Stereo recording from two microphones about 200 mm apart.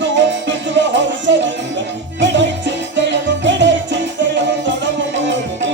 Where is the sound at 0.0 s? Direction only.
65° right (ahead or behind).